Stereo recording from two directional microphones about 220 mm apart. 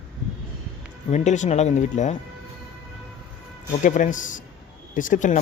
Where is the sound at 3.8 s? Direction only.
35° left (ahead or behind).